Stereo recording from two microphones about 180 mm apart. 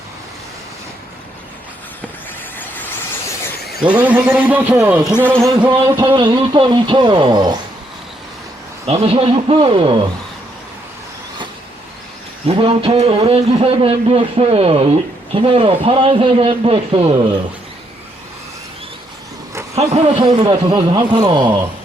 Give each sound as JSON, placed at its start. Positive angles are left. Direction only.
{"t": 2.6, "sound": "vehicle", "side_deg": 10}
{"t": 3.8, "sound": "a man's voice", "side_deg": -10}
{"t": 6.1, "sound": "a man's voice", "side_deg": -25}
{"t": 8.9, "sound": "a man's voice", "side_deg": -35}
{"t": 12.5, "sound": "a man's voice", "side_deg": -30}
{"t": 19.7, "sound": "a man's voice", "side_deg": -35}